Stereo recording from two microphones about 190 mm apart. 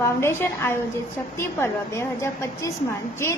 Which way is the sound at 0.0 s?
15° left (ahead or behind).